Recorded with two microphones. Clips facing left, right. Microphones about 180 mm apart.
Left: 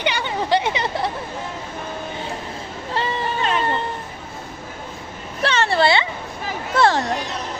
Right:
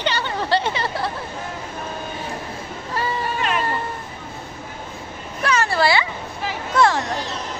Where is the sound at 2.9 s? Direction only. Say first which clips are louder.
Left 1 dB; 25° left (ahead or behind).